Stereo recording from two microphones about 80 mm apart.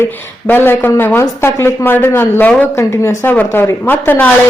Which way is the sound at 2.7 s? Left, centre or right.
Left.